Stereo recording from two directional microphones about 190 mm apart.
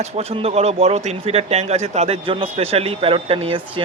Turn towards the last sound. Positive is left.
turn(degrees=-30)  # may be behind; listen again after turning